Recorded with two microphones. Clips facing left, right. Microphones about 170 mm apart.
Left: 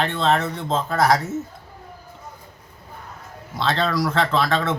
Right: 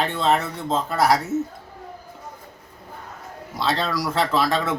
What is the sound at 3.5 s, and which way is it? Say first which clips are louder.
Speech: left 2 dB; 5° right (ahead or behind).